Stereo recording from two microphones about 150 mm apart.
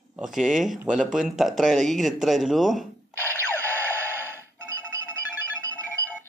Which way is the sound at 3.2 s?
15° left (ahead or behind).